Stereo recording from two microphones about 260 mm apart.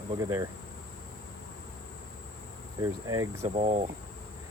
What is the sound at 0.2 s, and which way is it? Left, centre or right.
Speech, centre.